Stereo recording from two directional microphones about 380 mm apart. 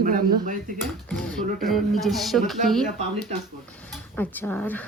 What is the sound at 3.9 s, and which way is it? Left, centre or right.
Speech, centre.